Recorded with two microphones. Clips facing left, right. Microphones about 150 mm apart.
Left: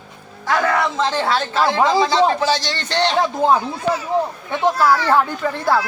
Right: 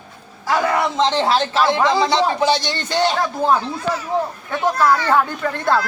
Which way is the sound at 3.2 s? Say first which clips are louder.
Left 2 dB; 15° left (ahead or behind).